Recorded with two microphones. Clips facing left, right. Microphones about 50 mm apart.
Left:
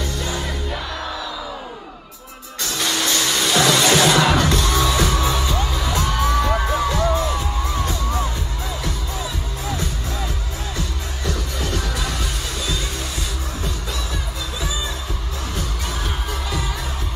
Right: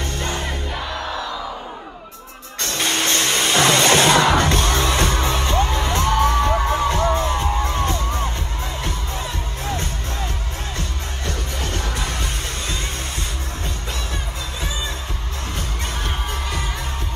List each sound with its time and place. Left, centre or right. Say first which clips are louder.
0.0 s music: even; right
2.6 s music: right 1 dB; right
15.5 s music: even; right